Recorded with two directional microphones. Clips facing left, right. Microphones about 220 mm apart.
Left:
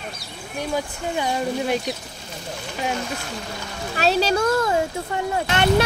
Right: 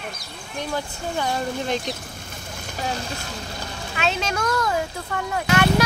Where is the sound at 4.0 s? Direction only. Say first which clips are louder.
Left 6 dB; 35° left (ahead or behind).